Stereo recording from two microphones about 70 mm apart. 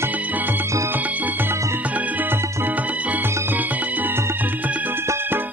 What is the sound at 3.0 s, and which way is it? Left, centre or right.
Music, right.